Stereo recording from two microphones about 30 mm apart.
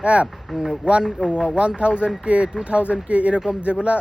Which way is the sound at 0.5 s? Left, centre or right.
Centre.